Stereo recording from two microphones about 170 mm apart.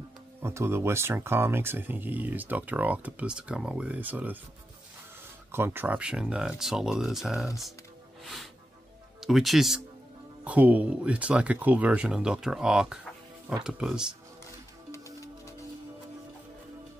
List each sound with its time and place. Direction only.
0.4 s speech: 15° right (ahead or behind)
5.5 s speech: 15° right (ahead or behind)
8.2 s music: centre (ahead or behind)
9.2 s speech: centre (ahead or behind)
14.9 s music: 20° left (ahead or behind)